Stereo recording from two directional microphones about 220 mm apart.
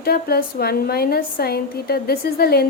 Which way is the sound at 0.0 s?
45° left (ahead or behind).